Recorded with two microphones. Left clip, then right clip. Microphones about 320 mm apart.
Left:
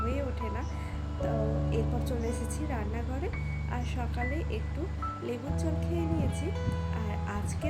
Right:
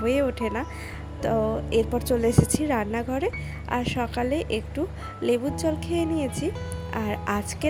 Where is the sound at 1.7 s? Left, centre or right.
Right.